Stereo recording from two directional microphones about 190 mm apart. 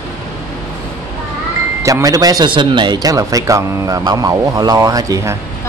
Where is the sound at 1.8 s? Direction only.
20° right (ahead or behind).